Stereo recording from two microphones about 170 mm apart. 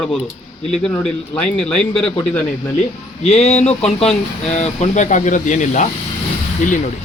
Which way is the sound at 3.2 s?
40° left (ahead or behind).